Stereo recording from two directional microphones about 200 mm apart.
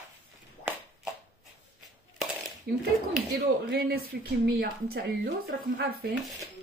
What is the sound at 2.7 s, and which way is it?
Speech, 50° right (ahead or behind).